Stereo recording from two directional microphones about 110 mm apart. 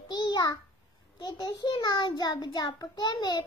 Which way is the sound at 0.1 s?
40° left (ahead or behind).